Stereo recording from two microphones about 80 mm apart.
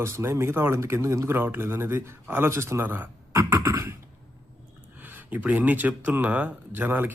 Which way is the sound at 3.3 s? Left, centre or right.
Right.